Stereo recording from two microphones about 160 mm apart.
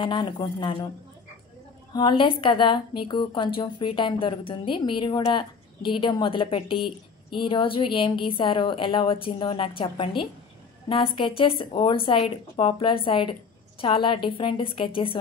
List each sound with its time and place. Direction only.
0.0 s a woman's voice: 30° left (ahead or behind)
2.0 s a woman's voice: 30° left (ahead or behind)